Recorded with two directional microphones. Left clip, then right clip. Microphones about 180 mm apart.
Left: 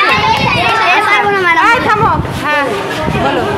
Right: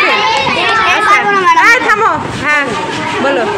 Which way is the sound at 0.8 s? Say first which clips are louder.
Right 1 dB; 15° left (ahead or behind).